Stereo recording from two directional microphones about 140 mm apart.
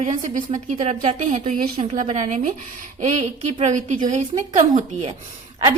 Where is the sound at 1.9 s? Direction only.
65° right (ahead or behind).